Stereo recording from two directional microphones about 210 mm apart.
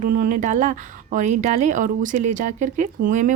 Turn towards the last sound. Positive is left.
turn(degrees=-35)  # may be behind; listen again after turning